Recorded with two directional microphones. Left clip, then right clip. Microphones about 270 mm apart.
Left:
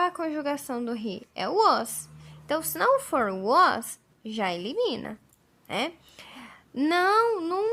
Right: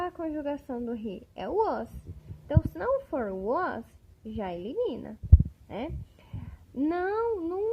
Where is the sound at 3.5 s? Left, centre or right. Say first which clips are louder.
Left 12 dB; centre.